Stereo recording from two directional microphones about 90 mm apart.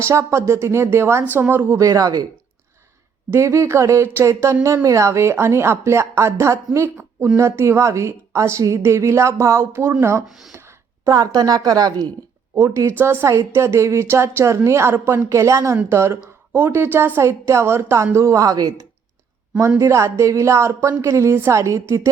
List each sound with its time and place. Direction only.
0.0 s a woman's voice: 35° right (ahead or behind)
1.8 s a woman's voice: 40° right (ahead or behind)
3.3 s a woman's voice: 30° right (ahead or behind)
10.2 s speech: 5° right (ahead or behind)
10.6 s a sound: 30° right (ahead or behind)
11.1 s a woman's voice: 45° right (ahead or behind)
12.5 s a woman's voice: 35° right (ahead or behind)
19.8 s a woman's voice: 35° right (ahead or behind)